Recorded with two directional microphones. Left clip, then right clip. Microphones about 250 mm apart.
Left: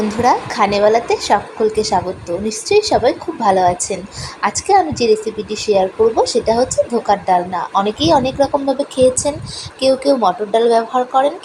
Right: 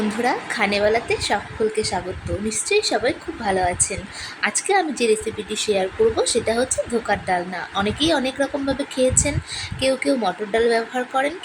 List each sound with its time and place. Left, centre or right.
0.2 s a woman's voice: centre